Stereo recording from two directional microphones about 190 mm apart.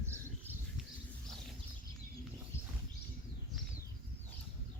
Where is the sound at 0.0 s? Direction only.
15° right (ahead or behind).